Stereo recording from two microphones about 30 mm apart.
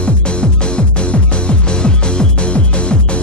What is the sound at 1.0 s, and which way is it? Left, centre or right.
Music, left.